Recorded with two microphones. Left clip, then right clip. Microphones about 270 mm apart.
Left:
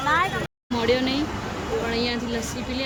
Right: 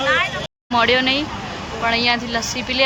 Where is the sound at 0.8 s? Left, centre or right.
Centre.